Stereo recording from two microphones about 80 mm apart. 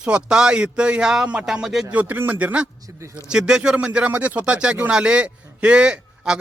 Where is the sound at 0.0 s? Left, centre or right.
Centre.